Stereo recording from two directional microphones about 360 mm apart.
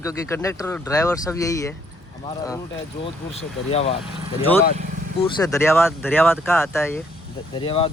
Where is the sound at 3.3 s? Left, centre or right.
Centre.